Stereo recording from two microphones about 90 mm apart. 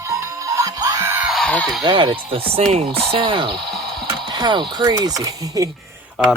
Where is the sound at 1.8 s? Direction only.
60° right (ahead or behind); by 3.0 s 90° right.